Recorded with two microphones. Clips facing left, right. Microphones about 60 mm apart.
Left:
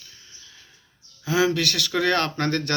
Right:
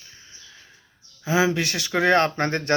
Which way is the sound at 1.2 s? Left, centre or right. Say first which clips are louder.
Even; right.